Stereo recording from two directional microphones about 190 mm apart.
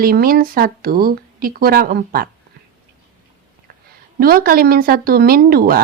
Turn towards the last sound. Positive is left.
turn(degrees=-50)  # may be behind; listen again after turning